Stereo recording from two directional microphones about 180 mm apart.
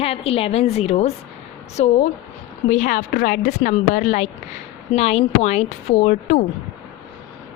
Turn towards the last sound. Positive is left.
turn(degrees=45)  # may be behind; listen again after turning